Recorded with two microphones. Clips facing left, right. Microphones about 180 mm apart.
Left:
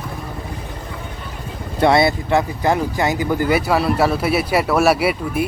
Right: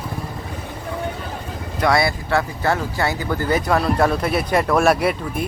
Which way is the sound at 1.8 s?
25° left (ahead or behind).